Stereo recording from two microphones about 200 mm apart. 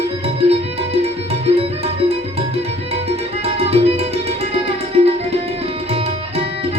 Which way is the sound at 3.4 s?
30° right (ahead or behind).